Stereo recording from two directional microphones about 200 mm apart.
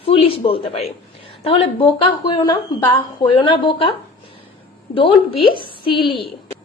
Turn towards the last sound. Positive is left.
turn(degrees=25)  # may be behind; listen again after turning